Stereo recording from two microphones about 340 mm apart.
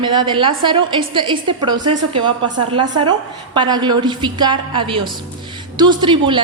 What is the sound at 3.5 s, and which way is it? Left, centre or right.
A woman's voice, centre.